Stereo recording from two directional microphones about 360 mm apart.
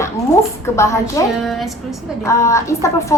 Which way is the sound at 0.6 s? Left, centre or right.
Centre.